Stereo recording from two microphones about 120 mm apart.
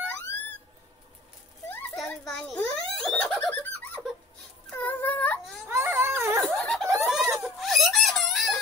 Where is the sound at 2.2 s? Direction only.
10° left (ahead or behind).